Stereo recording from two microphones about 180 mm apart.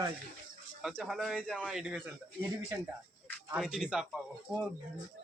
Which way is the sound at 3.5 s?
5° right (ahead or behind).